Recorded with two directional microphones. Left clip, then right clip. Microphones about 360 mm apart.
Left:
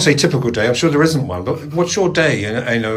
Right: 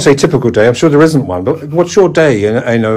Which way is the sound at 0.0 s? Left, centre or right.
Centre.